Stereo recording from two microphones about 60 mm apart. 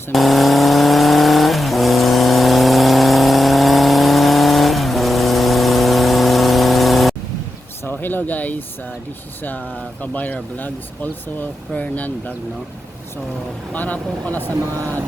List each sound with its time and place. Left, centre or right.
0.1 s vehicle: centre
7.9 s a sound: left
10.0 s speech: left
13.7 s speech: left
14.7 s speech: right